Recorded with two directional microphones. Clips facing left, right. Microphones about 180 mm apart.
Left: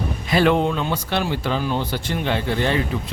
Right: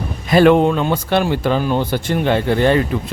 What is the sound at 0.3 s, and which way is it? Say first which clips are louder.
Speech: right 7 dB; 50° right (ahead or behind).